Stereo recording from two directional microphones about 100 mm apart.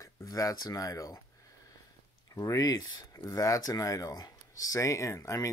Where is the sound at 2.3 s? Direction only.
35° left (ahead or behind).